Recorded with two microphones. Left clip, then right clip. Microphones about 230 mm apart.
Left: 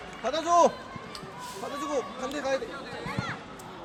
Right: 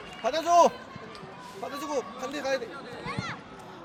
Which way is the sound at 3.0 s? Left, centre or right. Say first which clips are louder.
Even; right.